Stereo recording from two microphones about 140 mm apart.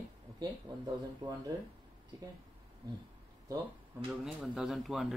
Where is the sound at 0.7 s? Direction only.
35° right (ahead or behind).